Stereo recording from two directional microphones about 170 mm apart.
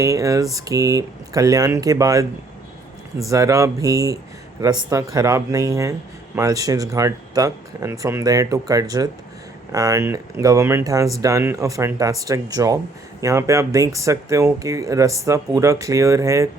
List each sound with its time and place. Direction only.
0.0 s speech: 20° right (ahead or behind)